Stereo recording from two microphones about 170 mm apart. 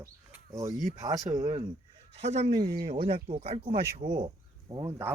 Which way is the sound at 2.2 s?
40° right (ahead or behind).